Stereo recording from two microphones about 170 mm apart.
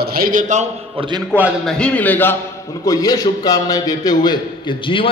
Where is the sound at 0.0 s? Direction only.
60° right (ahead or behind).